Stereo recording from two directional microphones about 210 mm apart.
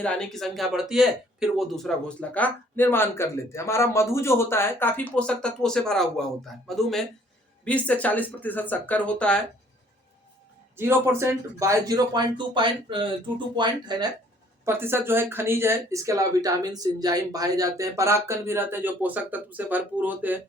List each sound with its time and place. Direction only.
0.0 s speech: 5° left (ahead or behind)
10.8 s speech: 10° right (ahead or behind)